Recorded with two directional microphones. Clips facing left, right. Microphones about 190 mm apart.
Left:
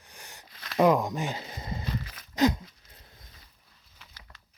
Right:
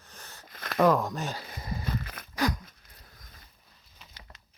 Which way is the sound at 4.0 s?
20° right (ahead or behind).